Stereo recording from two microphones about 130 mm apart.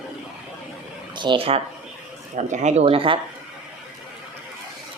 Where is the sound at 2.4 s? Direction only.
65° right (ahead or behind).